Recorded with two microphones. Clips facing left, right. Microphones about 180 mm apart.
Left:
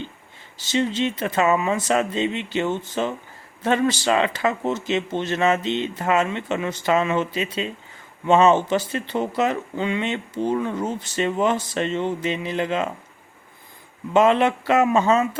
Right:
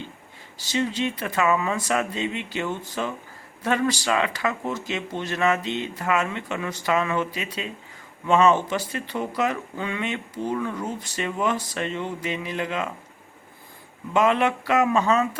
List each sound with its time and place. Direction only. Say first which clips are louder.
0.6 s speech: left 3 dB; 25° left (ahead or behind)
14.1 s speech: left 4 dB; 30° left (ahead or behind)